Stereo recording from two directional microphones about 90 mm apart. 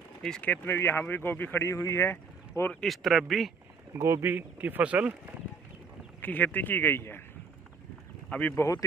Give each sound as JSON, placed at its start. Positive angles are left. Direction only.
{"t": 0.4, "sound": "speech", "side_deg": 20}
{"t": 2.0, "sound": "vehicle", "side_deg": 25}
{"t": 2.7, "sound": "speech", "side_deg": 5}
{"t": 3.9, "sound": "speech", "side_deg": -30}
{"t": 4.3, "sound": "speech", "side_deg": -20}
{"t": 6.2, "sound": "speech", "side_deg": 20}
{"t": 8.3, "sound": "speech", "side_deg": 20}